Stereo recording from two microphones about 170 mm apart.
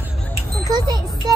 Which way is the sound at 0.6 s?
20° right (ahead or behind).